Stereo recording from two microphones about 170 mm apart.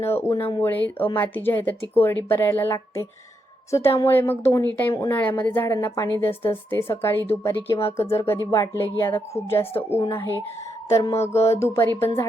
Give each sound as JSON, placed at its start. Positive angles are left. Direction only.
{"t": 0.0, "sound": "a woman's voice", "side_deg": 15}